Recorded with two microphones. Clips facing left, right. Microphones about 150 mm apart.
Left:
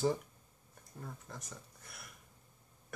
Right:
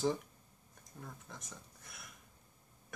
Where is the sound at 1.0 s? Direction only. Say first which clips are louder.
Left 3 dB; centre (ahead or behind).